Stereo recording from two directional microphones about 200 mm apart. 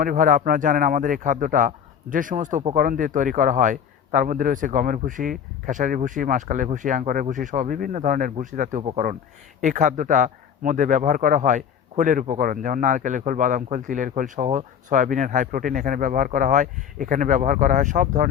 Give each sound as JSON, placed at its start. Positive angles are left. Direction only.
{"t": 0.0, "sound": "a man's voice", "side_deg": -45}